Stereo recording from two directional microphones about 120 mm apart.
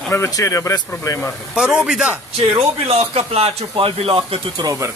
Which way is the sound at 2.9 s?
55° right (ahead or behind).